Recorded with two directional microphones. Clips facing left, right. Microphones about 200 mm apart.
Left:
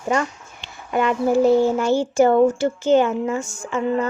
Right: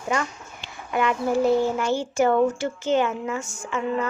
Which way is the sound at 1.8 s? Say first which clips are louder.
Left 5 dB; 35° left (ahead or behind).